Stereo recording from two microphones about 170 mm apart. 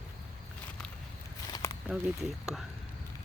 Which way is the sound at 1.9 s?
Centre (ahead or behind).